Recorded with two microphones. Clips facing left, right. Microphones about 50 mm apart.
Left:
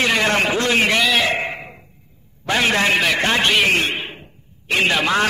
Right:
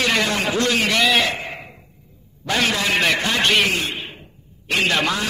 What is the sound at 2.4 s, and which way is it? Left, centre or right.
Speech, centre.